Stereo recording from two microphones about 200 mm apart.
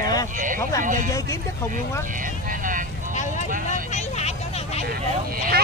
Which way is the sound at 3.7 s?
35° left (ahead or behind).